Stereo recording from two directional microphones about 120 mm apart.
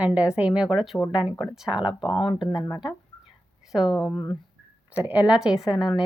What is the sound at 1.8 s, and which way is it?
Speech, 40° left (ahead or behind).